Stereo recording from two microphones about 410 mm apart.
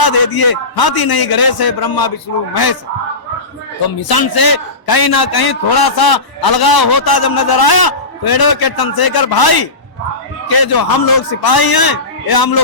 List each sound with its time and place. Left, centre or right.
0.0 s a man's voice: left
4.1 s a man's voice: left